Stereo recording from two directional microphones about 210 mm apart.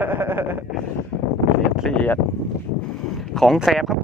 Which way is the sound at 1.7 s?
Centre (ahead or behind).